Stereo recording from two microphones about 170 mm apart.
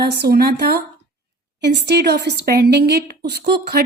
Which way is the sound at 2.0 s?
75° right (ahead or behind).